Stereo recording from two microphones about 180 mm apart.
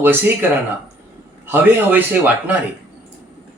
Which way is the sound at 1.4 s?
10° right (ahead or behind).